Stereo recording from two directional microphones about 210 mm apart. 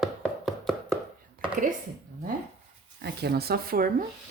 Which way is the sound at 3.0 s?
50° right (ahead or behind).